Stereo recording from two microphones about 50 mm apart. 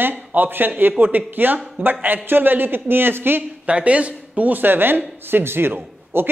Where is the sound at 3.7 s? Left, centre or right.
Right.